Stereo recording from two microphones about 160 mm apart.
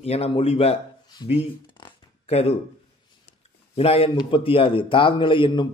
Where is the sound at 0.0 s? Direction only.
40° left (ahead or behind).